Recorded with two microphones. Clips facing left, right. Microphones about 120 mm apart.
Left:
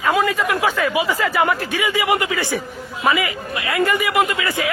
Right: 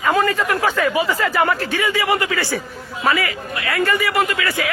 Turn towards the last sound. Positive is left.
turn(degrees=20)  # may be behind; listen again after turning